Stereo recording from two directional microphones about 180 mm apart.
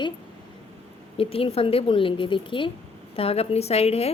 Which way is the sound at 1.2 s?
30° left (ahead or behind).